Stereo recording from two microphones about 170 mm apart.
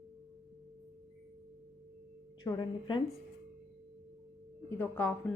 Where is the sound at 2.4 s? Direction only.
25° left (ahead or behind).